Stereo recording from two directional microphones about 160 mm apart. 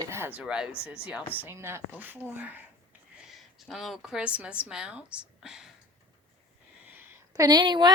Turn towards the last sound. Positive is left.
turn(degrees=-25)  # may be behind; listen again after turning